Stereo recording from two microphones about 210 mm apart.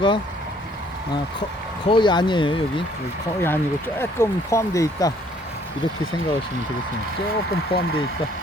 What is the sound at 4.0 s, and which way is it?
Speech, 15° left (ahead or behind).